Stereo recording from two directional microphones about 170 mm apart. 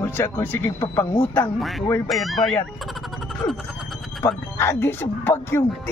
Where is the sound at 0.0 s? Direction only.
10° left (ahead or behind).